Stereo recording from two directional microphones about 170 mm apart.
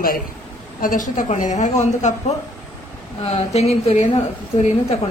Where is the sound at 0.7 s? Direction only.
55° left (ahead or behind).